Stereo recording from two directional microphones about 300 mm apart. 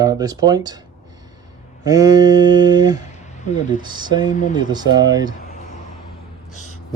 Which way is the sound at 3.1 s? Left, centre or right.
Left.